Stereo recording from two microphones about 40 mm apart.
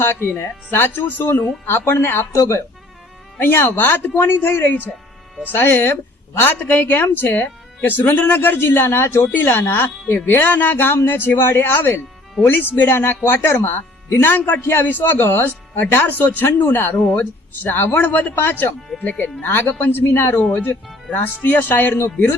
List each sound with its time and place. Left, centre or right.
0.0 s speech: left
3.4 s speech: left
6.4 s speech: left
9.3 s speech: left
10.5 s speech: left
15.7 s speech: left
17.2 s speech: left
18.9 s speech: left
19.2 s speech: left
21.1 s speech: left